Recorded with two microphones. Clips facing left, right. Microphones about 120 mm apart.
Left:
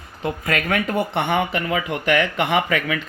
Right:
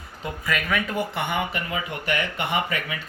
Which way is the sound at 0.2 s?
55° left (ahead or behind).